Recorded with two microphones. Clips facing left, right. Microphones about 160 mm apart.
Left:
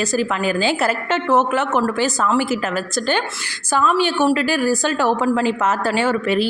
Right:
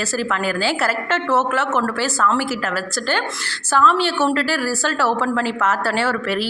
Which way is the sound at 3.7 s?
15° left (ahead or behind).